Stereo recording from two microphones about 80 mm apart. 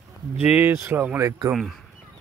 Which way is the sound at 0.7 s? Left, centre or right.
Right.